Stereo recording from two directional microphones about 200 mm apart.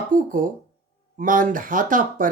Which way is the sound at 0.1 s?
45° right (ahead or behind).